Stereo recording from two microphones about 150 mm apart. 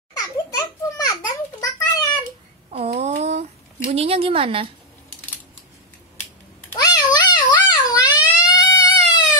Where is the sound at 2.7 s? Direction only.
45° right (ahead or behind).